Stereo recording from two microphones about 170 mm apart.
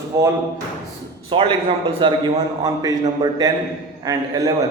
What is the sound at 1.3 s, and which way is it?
A man's voice, 30° right (ahead or behind).